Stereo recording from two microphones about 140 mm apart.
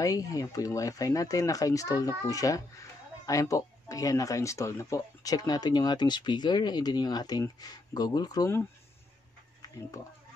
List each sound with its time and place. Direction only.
0.0 s speech: 25° left (ahead or behind)